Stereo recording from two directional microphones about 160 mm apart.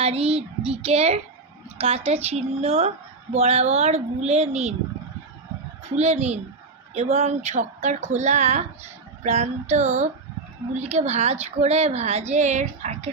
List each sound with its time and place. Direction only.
0.0 s a woman's voice: 40° right (ahead or behind)
5.9 s speech: 40° right (ahead or behind)